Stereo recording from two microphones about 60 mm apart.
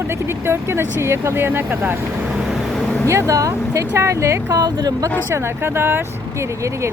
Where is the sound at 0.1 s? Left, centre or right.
Right.